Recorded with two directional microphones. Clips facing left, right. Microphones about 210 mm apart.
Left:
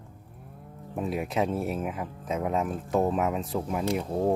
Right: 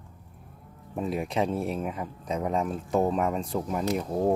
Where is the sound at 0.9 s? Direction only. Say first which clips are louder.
Even; 5° left (ahead or behind).